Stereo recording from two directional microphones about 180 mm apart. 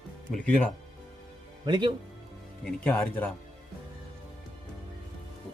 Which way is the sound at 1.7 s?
25° right (ahead or behind).